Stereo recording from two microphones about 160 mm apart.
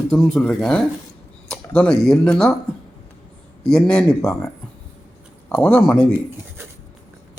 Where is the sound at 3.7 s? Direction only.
5° left (ahead or behind).